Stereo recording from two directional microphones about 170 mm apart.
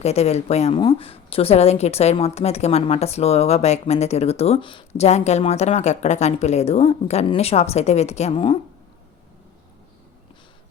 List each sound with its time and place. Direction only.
0.0 s a woman's voice: 40° left (ahead or behind)